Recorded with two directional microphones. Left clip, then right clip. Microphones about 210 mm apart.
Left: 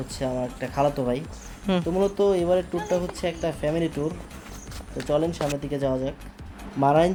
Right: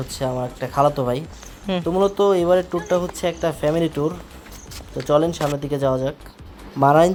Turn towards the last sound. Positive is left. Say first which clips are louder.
# right 5 dB
turn(degrees=-10)  # may be behind; listen again after turning